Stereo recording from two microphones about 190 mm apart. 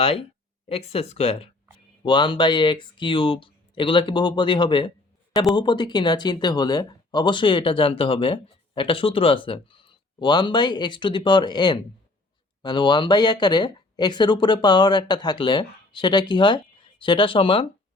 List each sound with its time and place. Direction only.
0.0 s speech: 30° left (ahead or behind)